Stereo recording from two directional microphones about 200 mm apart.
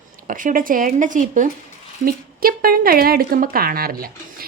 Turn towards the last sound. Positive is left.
turn(degrees=-45)  # may be behind; listen again after turning